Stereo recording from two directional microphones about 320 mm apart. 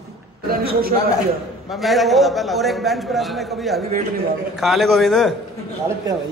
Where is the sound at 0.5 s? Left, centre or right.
Right.